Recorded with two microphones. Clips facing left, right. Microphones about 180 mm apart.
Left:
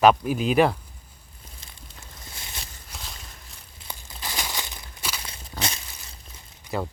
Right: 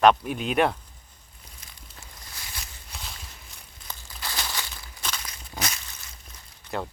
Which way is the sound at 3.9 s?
20° left (ahead or behind).